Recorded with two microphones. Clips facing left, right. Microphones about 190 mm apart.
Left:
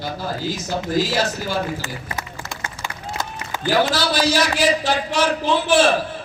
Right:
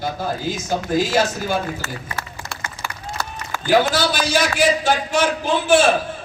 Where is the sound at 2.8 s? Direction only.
15° right (ahead or behind).